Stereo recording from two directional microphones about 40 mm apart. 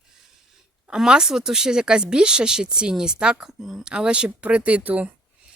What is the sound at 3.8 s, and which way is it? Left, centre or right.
Speech, centre.